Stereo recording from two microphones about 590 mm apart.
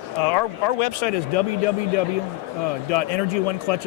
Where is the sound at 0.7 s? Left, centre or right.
Left.